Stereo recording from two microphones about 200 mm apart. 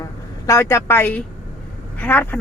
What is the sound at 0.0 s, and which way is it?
A woman's voice, 15° left (ahead or behind).